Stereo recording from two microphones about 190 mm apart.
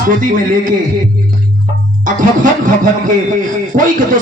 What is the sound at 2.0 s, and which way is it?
A man's voice, 40° right (ahead or behind).